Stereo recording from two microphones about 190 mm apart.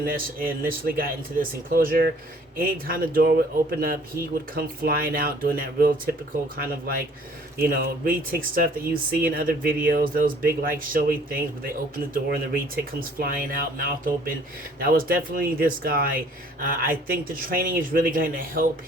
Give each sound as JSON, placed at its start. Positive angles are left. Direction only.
{"t": 0.0, "sound": "speech", "side_deg": -50}
{"t": 4.5, "sound": "speech", "side_deg": -50}